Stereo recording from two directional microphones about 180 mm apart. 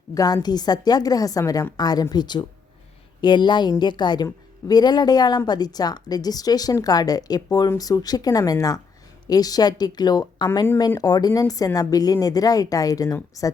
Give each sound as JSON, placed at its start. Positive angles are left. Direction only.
{"t": 0.1, "sound": "speech", "side_deg": 20}